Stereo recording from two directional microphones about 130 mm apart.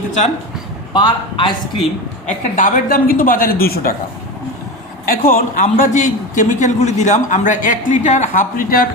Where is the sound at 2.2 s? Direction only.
80° left.